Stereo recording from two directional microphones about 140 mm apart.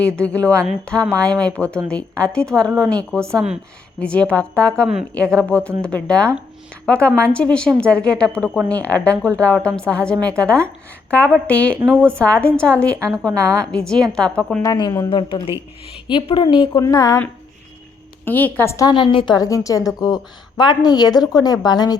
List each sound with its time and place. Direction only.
0.2 s a woman's voice: 10° left (ahead or behind)
3.3 s a woman's voice: 5° right (ahead or behind)
4.0 s a woman's voice: 10° left (ahead or behind)
13.4 s a woman's voice: 20° right (ahead or behind)
13.7 s a woman's voice: 5° left (ahead or behind)
14.6 s a woman's voice: 25° left (ahead or behind)
16.8 s a woman's voice: 25° left (ahead or behind)
18.3 s a woman's voice: 15° left (ahead or behind)
18.9 s a woman's voice: 35° left (ahead or behind)